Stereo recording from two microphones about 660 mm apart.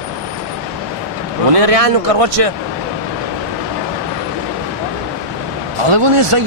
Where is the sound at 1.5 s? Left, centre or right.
Right.